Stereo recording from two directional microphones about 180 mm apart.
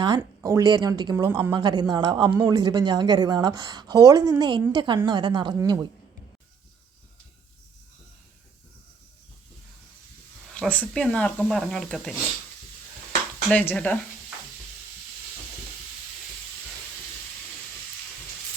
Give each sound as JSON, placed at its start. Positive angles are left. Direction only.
{"t": 0.2, "sound": "a woman's voice", "side_deg": -15}
{"t": 10.5, "sound": "speech", "side_deg": 5}
{"t": 13.5, "sound": "speech", "side_deg": 10}